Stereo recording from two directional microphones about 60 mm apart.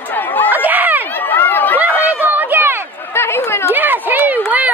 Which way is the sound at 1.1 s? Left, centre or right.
Left.